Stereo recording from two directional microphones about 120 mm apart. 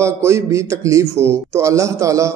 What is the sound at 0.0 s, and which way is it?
A man's voice, 25° right (ahead or behind).